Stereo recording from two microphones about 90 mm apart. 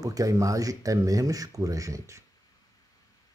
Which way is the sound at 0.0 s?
40° right (ahead or behind).